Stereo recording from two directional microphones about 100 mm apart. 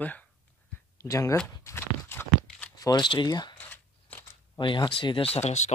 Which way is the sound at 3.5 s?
15° left (ahead or behind).